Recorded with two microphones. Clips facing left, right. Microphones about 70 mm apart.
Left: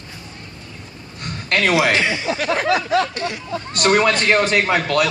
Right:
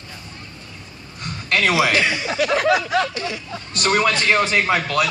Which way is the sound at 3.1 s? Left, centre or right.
Left.